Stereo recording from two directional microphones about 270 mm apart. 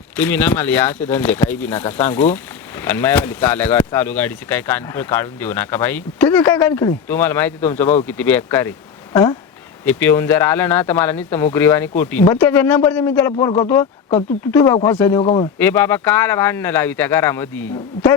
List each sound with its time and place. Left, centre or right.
0.2 s speech: centre
9.8 s speech: centre
14.5 s speech: centre
15.2 s speech: left
15.5 s speech: centre